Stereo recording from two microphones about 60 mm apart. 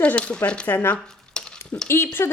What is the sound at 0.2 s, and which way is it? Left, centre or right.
Speech, centre.